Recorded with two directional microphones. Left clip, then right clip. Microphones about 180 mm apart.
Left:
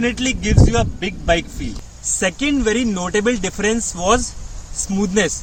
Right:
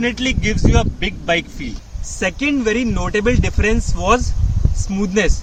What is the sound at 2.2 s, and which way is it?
Speech, 10° left (ahead or behind).